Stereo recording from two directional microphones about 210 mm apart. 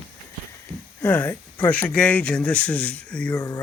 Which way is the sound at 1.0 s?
10° left (ahead or behind).